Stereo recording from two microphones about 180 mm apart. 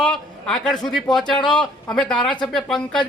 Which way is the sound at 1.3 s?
25° left (ahead or behind).